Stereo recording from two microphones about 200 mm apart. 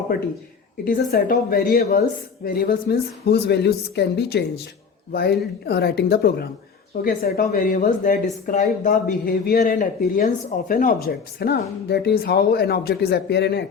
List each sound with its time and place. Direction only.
0.9 s speech: 45° left (ahead or behind)